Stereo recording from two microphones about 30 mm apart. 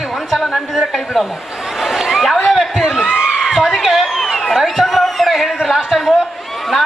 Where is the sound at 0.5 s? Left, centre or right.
Centre.